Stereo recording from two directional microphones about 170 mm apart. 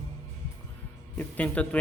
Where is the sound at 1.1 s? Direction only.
10° left (ahead or behind).